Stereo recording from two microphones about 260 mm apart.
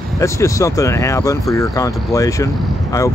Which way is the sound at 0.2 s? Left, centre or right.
Centre.